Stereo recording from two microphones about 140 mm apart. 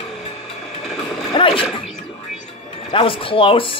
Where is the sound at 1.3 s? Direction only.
40° left (ahead or behind).